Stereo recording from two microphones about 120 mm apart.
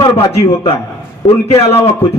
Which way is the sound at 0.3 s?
55° left (ahead or behind).